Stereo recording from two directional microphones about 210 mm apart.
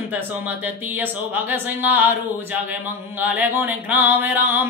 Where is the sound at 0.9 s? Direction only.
10° right (ahead or behind).